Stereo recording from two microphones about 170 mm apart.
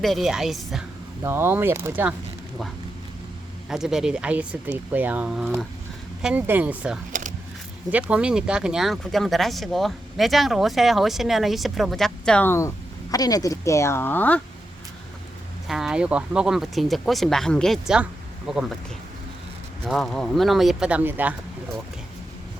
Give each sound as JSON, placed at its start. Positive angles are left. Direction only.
{"t": 0.0, "sound": "speech", "side_deg": 0}
{"t": 1.2, "sound": "speech", "side_deg": -15}
{"t": 3.7, "sound": "speech", "side_deg": -5}
{"t": 7.1, "sound": "a sound", "side_deg": -45}
{"t": 7.9, "sound": "speech", "side_deg": -10}
{"t": 15.6, "sound": "speech", "side_deg": 0}
{"t": 19.9, "sound": "speech", "side_deg": 0}